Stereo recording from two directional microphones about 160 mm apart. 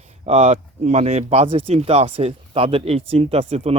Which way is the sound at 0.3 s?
40° right (ahead or behind).